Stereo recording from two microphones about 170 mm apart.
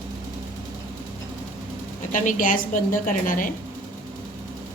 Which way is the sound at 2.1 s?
50° left (ahead or behind).